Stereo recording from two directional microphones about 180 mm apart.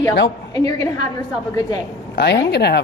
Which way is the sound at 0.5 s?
20° left (ahead or behind).